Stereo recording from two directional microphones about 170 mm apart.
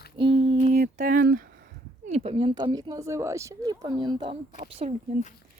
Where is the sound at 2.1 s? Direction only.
40° right (ahead or behind).